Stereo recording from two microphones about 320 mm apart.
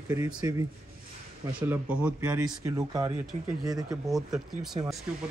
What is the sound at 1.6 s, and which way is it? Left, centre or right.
Speech, centre.